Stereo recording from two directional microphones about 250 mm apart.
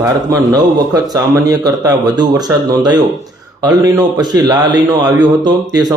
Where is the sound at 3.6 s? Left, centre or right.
Centre.